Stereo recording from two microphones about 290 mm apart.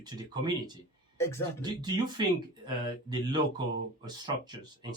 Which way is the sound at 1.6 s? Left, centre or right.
Centre.